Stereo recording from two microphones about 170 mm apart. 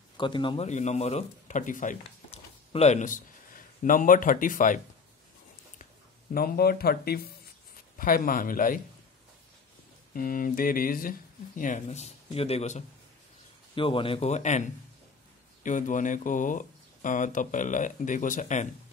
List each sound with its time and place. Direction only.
0.2 s speech: 30° left (ahead or behind)
0.7 s a man's voice: 40° left (ahead or behind)
6.3 s speech: 60° left (ahead or behind)
10.1 s speech: 55° left (ahead or behind)